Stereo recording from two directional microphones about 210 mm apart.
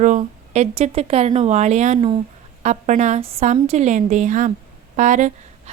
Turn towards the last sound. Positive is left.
turn(degrees=-35)  # may be behind; listen again after turning